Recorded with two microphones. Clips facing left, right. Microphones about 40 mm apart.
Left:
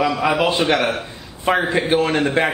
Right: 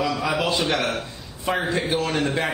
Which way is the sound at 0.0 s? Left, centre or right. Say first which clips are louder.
Left 6 dB; left.